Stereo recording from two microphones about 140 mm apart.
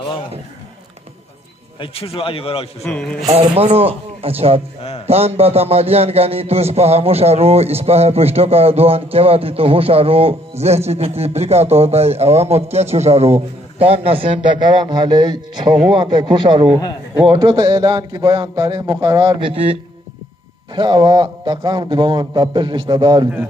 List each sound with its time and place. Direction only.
1.8 s a man's voice: 40° left (ahead or behind)
2.9 s speech: 5° left (ahead or behind)
3.5 s a man's voice: 45° right (ahead or behind)